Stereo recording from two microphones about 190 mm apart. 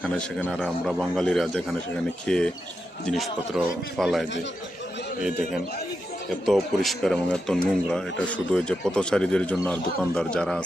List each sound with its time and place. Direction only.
0.0 s speech: 5° left (ahead or behind)
6.4 s speech: centre (ahead or behind)